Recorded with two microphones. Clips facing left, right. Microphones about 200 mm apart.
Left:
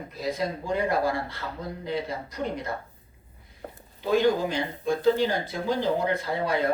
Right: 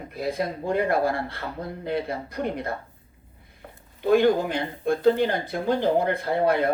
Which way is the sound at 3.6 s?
45° left (ahead or behind).